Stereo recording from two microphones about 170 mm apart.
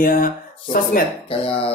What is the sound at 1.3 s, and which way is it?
Speech, 35° left (ahead or behind).